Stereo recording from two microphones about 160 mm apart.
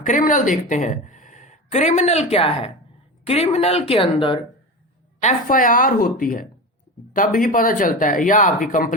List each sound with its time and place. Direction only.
0.0 s speech: 55° left (ahead or behind); by 4.4 s 35° left (ahead or behind)
5.2 s speech: 60° left (ahead or behind)